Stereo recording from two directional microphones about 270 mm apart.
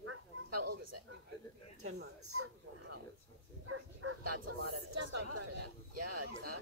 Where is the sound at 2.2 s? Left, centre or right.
Right.